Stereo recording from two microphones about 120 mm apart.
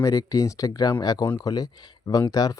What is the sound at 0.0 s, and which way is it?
Speech, 30° left (ahead or behind).